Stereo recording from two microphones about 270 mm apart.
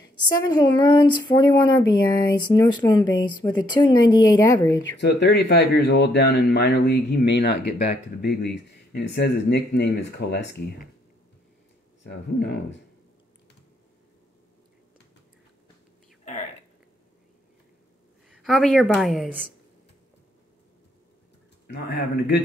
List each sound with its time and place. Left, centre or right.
0.3 s speech: centre
5.0 s speech: left
18.3 s a woman's voice: centre
21.6 s speech: left